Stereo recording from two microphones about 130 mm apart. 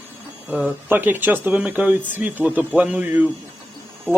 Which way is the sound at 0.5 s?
10° right (ahead or behind).